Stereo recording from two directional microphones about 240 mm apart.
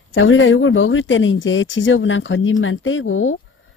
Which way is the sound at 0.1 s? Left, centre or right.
Left.